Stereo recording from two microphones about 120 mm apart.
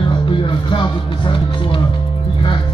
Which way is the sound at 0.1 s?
45° left (ahead or behind).